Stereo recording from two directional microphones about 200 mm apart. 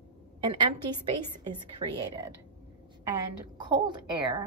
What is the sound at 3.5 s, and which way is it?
Speech, 25° right (ahead or behind).